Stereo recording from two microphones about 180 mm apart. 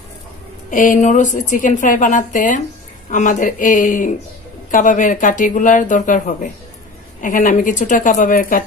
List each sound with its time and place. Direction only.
0.7 s a woman's voice: 45° left (ahead or behind)